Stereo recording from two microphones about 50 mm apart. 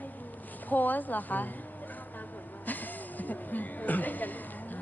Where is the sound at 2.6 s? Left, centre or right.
Left.